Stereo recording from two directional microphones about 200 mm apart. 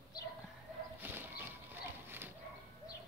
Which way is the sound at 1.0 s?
10° right (ahead or behind).